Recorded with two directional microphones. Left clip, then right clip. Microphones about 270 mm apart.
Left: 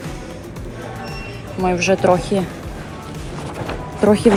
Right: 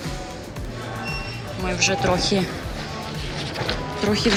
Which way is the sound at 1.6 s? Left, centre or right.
Centre.